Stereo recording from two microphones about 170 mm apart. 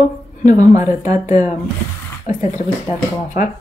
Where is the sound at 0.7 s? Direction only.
20° right (ahead or behind).